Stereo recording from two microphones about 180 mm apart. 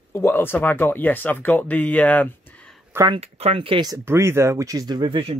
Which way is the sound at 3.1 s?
35° right (ahead or behind).